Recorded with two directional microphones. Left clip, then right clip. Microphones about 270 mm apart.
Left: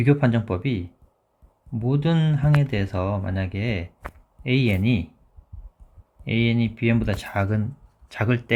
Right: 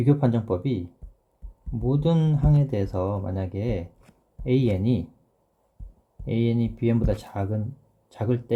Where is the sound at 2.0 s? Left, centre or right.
Left.